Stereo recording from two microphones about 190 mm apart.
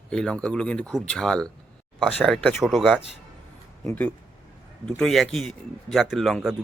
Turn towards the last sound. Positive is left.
turn(degrees=0)  # may be behind; listen again after turning